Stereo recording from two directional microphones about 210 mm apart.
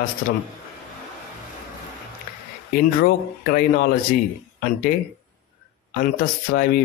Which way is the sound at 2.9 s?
45° left (ahead or behind).